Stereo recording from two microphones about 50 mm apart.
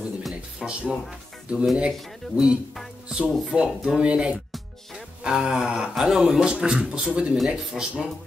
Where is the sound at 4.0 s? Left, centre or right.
Centre.